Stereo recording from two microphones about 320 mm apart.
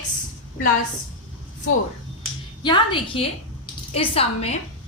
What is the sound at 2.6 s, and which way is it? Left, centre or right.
A woman's voice, centre.